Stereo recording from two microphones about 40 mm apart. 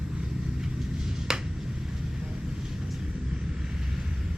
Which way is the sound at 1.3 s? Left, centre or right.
Centre.